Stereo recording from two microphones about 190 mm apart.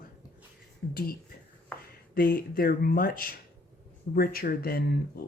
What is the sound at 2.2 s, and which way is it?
Speech, 50° left (ahead or behind).